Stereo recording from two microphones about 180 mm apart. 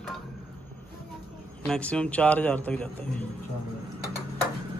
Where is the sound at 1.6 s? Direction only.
5° left (ahead or behind).